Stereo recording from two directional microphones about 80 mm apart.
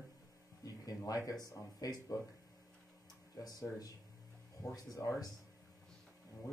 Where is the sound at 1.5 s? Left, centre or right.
Left.